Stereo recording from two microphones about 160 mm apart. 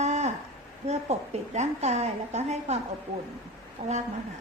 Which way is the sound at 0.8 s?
45° right (ahead or behind).